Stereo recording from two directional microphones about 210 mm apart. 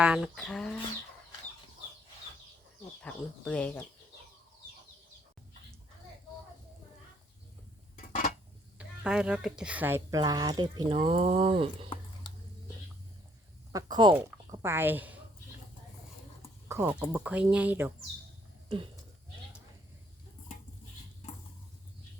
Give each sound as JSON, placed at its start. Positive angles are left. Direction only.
{"t": 0.0, "sound": "speech", "side_deg": -5}
{"t": 3.0, "sound": "speech", "side_deg": 5}
{"t": 7.9, "sound": "a sound", "side_deg": 40}
{"t": 8.8, "sound": "speech", "side_deg": -5}
{"t": 13.7, "sound": "speech", "side_deg": -20}
{"t": 16.6, "sound": "speech", "side_deg": -10}